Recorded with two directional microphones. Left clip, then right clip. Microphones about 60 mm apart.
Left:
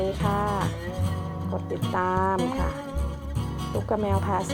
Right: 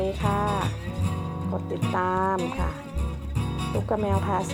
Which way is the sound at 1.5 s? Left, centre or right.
Centre.